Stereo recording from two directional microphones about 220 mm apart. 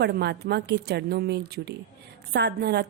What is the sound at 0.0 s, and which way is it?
A woman's voice, 50° right (ahead or behind).